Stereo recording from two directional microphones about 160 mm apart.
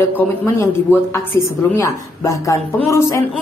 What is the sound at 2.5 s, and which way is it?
Speech, 15° left (ahead or behind).